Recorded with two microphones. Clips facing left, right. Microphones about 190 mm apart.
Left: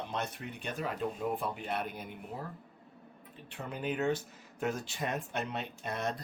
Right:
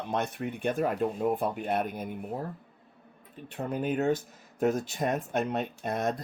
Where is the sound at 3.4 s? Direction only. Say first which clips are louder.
Right 6 dB; 45° right (ahead or behind).